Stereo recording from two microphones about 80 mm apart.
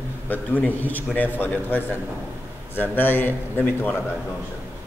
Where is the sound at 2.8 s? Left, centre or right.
Left.